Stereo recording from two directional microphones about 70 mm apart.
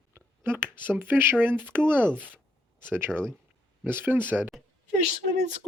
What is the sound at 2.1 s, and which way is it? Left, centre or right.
Speech, centre.